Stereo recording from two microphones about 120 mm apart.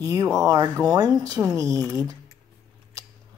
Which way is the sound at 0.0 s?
30° right (ahead or behind).